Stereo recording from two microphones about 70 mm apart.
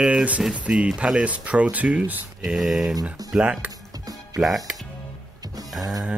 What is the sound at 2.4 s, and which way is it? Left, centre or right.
Speech, centre.